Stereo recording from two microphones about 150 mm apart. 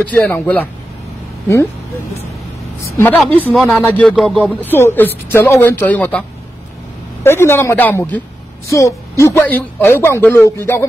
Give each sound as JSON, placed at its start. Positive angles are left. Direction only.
{"t": 0.0, "sound": "speech", "side_deg": 10}
{"t": 3.2, "sound": "speech", "side_deg": 10}
{"t": 7.2, "sound": "speech", "side_deg": 15}